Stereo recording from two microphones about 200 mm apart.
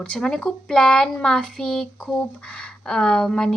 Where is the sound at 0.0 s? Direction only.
5° left (ahead or behind).